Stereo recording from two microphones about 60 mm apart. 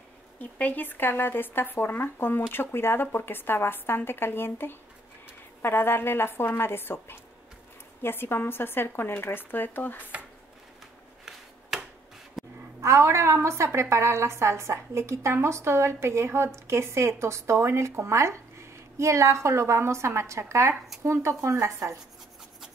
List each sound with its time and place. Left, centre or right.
0.4 s speech: left
11.7 s tick-tock: centre
12.4 s a sound: centre
12.8 s a woman's voice: right